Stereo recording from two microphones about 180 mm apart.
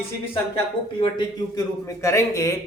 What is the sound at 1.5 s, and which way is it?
A man's voice, 20° left (ahead or behind).